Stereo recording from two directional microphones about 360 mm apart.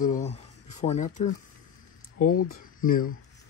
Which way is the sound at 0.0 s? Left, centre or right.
Centre.